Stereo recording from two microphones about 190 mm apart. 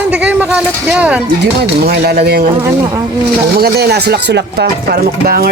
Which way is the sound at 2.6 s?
20° right (ahead or behind).